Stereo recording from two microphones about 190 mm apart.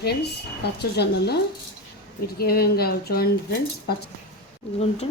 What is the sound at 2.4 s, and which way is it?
Speech, 55° left (ahead or behind).